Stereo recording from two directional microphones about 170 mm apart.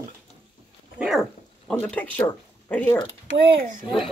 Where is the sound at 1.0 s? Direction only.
10° right (ahead or behind).